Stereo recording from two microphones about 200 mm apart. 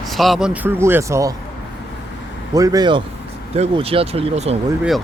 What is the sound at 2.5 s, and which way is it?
Speech, 20° right (ahead or behind).